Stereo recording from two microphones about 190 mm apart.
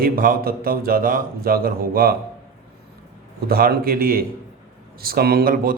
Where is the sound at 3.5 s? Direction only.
50° right (ahead or behind).